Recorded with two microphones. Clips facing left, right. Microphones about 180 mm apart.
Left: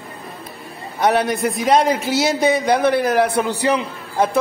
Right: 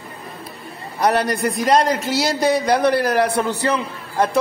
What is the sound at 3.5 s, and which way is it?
Speech, 15° left (ahead or behind).